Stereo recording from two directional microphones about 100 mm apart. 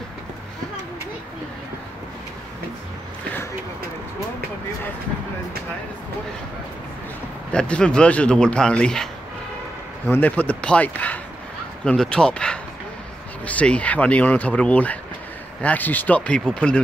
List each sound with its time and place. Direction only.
7.5 s speech: 10° left (ahead or behind)